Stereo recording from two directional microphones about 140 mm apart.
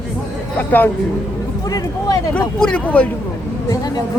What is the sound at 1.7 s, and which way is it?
Speech, 25° left (ahead or behind).